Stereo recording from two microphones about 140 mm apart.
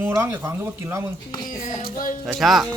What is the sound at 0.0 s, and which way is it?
Speech, 15° right (ahead or behind).